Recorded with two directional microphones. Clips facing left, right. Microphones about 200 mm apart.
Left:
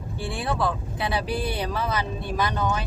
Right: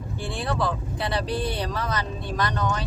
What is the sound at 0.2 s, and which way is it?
Speech, 5° left (ahead or behind).